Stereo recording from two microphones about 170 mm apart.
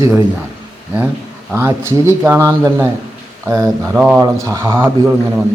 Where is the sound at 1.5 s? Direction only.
15° right (ahead or behind).